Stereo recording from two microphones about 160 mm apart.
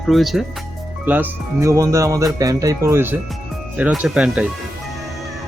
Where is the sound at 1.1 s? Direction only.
10° right (ahead or behind).